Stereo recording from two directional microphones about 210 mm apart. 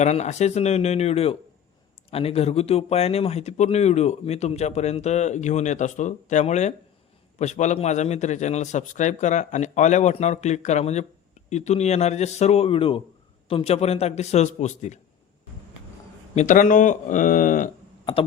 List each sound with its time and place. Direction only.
0.0 s speech: 30° left (ahead or behind)
16.3 s speech: 35° left (ahead or behind)